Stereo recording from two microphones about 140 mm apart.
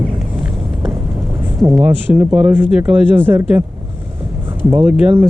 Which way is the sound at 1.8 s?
10° right (ahead or behind).